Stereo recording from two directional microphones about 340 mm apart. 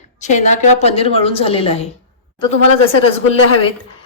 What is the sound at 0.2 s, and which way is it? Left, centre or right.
A woman's voice, left.